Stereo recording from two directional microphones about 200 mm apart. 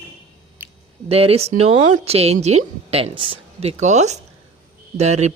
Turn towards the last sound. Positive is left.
turn(degrees=-35)  # may be behind; listen again after turning